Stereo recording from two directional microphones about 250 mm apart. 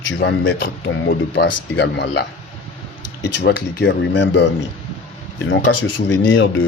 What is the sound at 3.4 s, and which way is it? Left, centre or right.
Speech, left.